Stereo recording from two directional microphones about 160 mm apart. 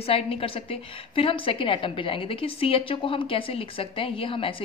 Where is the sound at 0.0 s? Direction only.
35° left (ahead or behind).